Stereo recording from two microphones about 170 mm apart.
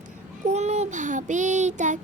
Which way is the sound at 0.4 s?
40° right (ahead or behind).